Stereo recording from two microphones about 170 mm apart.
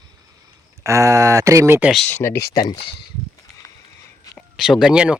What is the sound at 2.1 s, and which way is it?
Speech, 15° left (ahead or behind).